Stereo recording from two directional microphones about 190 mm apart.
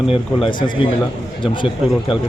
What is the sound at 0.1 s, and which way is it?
Speech, 30° left (ahead or behind).